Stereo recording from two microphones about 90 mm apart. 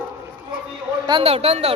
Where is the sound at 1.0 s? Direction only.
60° right (ahead or behind).